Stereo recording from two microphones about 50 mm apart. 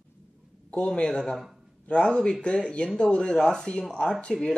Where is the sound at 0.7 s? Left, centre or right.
Left.